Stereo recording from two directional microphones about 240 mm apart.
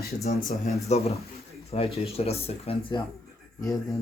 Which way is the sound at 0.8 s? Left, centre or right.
Left.